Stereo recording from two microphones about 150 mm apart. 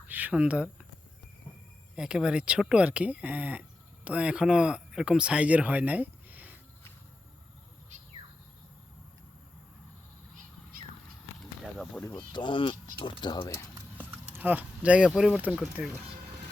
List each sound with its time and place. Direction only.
0.1 s speech: 10° right (ahead or behind)
2.0 s speech: 5° right (ahead or behind)
11.6 s a sound: centre (ahead or behind)
12.3 s speech: 35° left (ahead or behind)
14.0 s speech: 10° right (ahead or behind)